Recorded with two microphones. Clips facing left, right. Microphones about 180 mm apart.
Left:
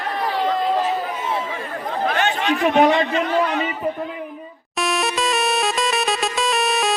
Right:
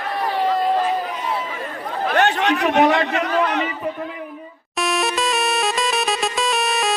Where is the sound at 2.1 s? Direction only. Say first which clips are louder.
Right 6 dB; 65° right (ahead or behind).